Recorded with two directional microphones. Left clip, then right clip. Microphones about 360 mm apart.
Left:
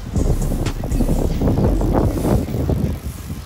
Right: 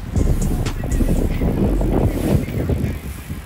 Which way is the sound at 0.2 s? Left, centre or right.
Centre.